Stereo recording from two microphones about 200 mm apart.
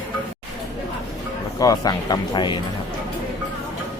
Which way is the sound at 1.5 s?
15° left (ahead or behind).